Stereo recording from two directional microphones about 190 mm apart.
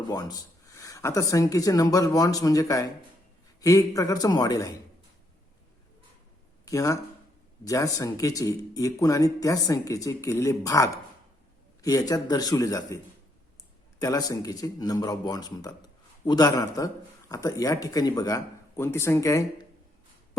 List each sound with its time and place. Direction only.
0.1 s speech: 20° left (ahead or behind)
6.7 s speech: 15° left (ahead or behind)
14.0 s speech: 20° left (ahead or behind)